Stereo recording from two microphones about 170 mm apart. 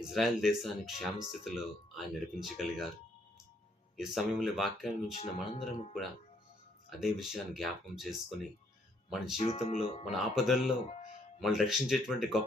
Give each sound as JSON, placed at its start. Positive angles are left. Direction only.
{"t": 0.1, "sound": "speech", "side_deg": 0}
{"t": 3.9, "sound": "speech", "side_deg": 0}
{"t": 5.1, "sound": "speech", "side_deg": 40}
{"t": 7.0, "sound": "speech", "side_deg": 0}
{"t": 9.4, "sound": "speech", "side_deg": 35}
{"t": 10.2, "sound": "speech", "side_deg": 0}